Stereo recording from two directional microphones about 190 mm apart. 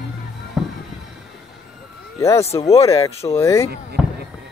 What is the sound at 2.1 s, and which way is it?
Speech, 15° left (ahead or behind).